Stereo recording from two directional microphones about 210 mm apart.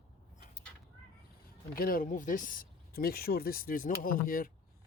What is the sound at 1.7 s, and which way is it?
Speech, 45° left (ahead or behind).